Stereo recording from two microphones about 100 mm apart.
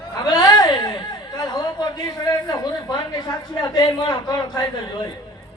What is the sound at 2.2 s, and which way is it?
A man's voice, 40° left (ahead or behind).